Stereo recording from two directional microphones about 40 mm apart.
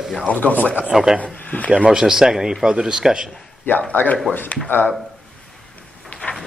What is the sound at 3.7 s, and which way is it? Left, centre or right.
Speech, left.